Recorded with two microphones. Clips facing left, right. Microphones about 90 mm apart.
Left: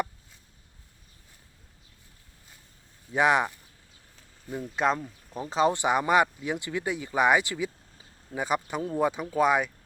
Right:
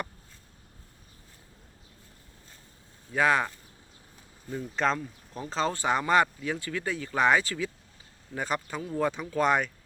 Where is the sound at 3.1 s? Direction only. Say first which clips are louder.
Left 2 dB; 20° left (ahead or behind).